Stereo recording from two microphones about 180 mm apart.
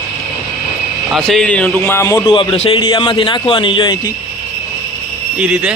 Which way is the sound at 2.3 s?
30° left (ahead or behind).